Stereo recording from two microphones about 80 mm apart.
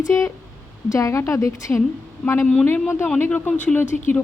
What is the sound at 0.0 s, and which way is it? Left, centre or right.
Speech, left.